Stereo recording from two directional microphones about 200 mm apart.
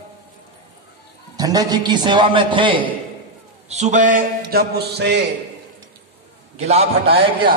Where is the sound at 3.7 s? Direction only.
35° right (ahead or behind); by 5.2 s 55° right (ahead or behind).